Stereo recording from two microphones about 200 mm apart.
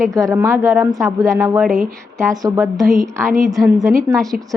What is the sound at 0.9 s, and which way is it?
Speech, centre (ahead or behind).